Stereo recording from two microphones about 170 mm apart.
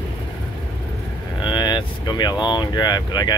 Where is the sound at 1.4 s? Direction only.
25° left (ahead or behind).